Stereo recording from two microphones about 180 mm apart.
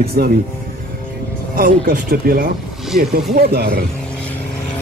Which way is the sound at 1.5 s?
50° right (ahead or behind).